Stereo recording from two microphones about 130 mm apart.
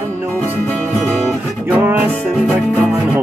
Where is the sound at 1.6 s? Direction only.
15° right (ahead or behind).